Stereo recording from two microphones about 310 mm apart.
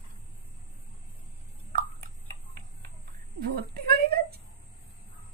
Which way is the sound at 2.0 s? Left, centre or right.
Right.